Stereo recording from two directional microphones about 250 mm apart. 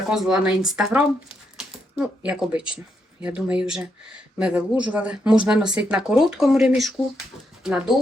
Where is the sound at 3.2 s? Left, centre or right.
Centre.